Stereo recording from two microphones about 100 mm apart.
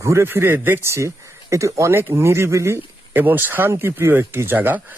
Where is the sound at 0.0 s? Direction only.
30° right (ahead or behind).